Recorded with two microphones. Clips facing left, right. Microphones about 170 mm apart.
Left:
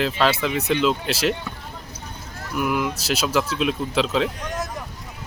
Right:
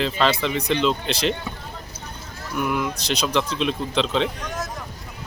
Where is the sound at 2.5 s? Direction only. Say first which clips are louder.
Left 1 dB; 5° left (ahead or behind).